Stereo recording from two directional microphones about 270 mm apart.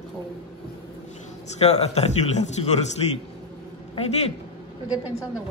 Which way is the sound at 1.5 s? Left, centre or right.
Left.